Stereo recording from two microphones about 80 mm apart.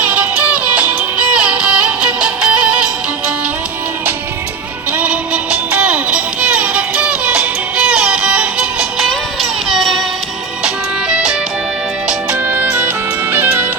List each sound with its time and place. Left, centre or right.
0.0 s music: centre
4.9 s music: centre
9.0 s music: centre
11.1 s music: centre
12.5 s music: right